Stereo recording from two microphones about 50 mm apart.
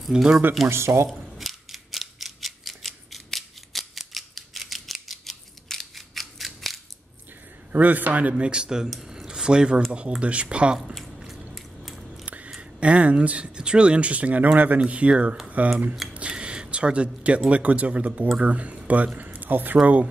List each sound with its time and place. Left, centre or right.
0.1 s speech: centre
0.7 s speech: right
1.0 s mechanisms: centre
7.7 s a man's voice: right; by 8.9 s centre
8.9 s a sound: centre
9.9 s speech: right
11.0 s squish: centre
11.5 s biting: centre
12.4 s speech: centre
16.1 s a sound: right
17.5 s speech: right